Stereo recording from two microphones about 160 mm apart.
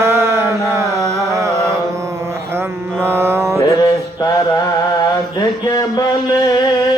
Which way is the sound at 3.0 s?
15° right (ahead or behind).